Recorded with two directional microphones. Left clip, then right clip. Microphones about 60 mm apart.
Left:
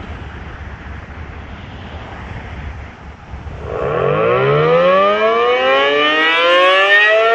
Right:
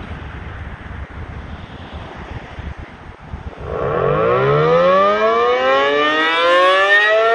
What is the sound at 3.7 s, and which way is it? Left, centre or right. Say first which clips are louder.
Civil defense siren: left 1 dB; centre.